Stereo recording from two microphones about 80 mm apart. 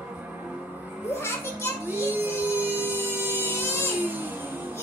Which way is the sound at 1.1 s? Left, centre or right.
Left.